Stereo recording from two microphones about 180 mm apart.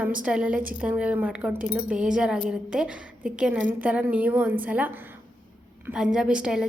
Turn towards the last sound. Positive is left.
turn(degrees=-5)  # may be behind; listen again after turning